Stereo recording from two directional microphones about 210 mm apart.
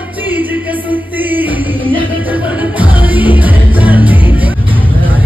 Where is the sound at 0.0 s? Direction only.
10° right (ahead or behind).